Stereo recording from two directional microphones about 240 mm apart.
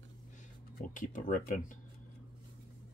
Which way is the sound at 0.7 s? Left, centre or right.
Left.